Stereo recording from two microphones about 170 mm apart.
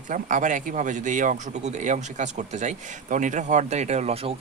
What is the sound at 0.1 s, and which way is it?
Speech, 50° right (ahead or behind).